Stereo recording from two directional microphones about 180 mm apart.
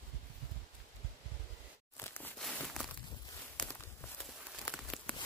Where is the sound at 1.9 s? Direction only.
15° left (ahead or behind).